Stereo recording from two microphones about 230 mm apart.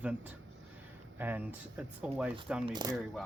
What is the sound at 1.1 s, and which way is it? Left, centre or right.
Speech, centre.